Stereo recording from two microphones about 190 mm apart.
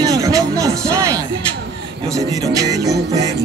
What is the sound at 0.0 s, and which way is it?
Music, 20° right (ahead or behind).